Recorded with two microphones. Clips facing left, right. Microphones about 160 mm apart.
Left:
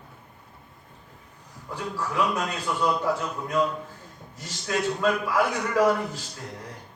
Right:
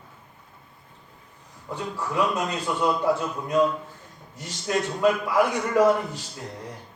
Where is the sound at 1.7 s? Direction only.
20° right (ahead or behind).